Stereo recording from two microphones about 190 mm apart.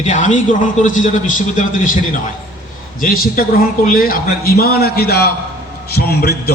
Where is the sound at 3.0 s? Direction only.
50° left (ahead or behind).